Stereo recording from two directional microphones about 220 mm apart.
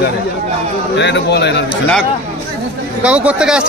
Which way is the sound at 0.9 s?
55° left (ahead or behind).